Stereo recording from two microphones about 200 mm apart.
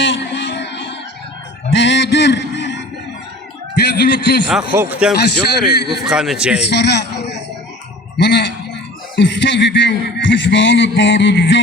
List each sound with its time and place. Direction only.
0.0 s music: 65° left (ahead or behind)
1.7 s a sound: 65° left (ahead or behind)
4.4 s a man's voice: 10° right (ahead or behind)
5.1 s a man's voice: 55° left (ahead or behind)
5.9 s a man's voice: centre (ahead or behind)
6.7 s a man's voice: 60° left (ahead or behind)